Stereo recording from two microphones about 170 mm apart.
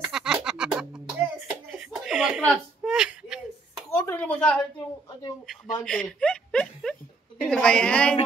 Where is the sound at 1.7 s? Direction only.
5° right (ahead or behind).